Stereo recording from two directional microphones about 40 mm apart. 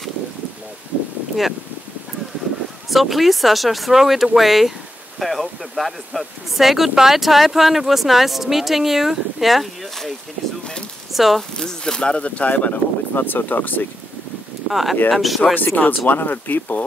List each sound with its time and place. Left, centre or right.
2.9 s speech: centre
11.1 s speech: centre
11.5 s speech: centre; by 12.8 s left
13.1 s speech: left
14.7 s speech: centre
15.5 s speech: left